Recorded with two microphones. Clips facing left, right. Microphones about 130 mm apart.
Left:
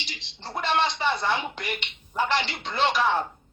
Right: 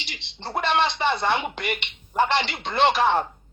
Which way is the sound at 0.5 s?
60° right (ahead or behind).